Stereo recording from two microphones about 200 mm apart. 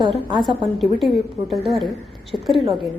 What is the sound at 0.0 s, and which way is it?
Speech, 20° right (ahead or behind).